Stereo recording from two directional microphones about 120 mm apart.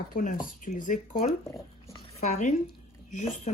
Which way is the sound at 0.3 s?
90° left.